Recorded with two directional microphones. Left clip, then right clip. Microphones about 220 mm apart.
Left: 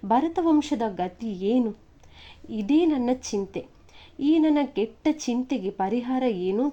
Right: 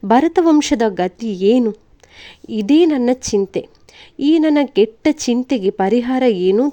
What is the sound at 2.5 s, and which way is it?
A woman's voice, 30° right (ahead or behind).